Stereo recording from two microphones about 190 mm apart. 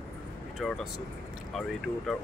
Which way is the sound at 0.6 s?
Centre (ahead or behind).